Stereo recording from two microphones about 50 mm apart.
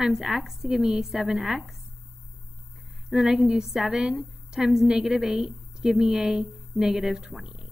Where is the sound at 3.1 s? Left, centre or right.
Centre.